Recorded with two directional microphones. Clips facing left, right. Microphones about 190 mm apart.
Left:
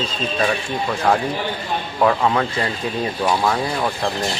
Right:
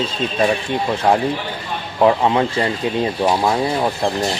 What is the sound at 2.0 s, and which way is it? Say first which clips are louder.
Speech: right 3 dB; 25° right (ahead or behind).